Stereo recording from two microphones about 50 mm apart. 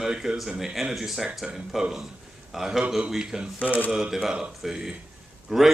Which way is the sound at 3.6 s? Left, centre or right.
Left.